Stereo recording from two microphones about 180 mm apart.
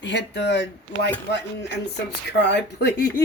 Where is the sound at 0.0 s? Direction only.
75° left (ahead or behind).